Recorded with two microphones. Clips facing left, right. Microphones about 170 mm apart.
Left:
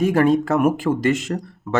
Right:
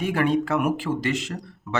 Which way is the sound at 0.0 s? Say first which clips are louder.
Left 6 dB; 40° left (ahead or behind).